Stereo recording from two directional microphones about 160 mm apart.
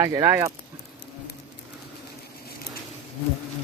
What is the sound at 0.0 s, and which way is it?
Speech, 20° right (ahead or behind).